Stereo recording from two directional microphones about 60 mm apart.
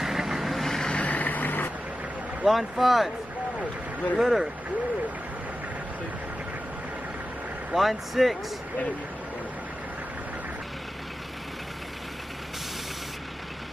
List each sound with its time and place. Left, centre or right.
0.0 s vehicle: centre
0.9 s vehicle: left
2.4 s speech: centre
4.2 s speech: centre
7.7 s speech: centre